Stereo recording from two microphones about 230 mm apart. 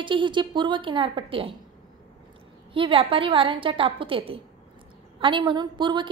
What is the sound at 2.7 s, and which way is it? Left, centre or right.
A woman's voice, right.